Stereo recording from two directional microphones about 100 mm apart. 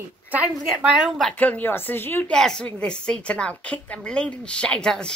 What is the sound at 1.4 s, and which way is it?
Speech, 15° left (ahead or behind).